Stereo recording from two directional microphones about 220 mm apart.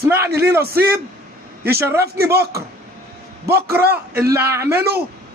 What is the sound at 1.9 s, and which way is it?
Speech, 45° right (ahead or behind).